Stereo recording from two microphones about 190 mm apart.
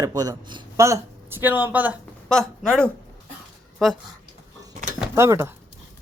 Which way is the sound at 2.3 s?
5° left (ahead or behind).